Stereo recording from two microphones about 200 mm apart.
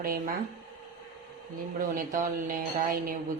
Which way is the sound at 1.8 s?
40° right (ahead or behind).